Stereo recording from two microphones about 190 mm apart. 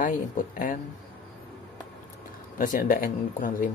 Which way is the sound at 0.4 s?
45° left (ahead or behind).